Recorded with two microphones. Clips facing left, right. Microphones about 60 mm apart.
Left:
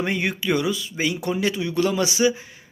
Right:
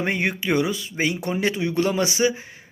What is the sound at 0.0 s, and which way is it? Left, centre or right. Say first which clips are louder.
Speech: even; right.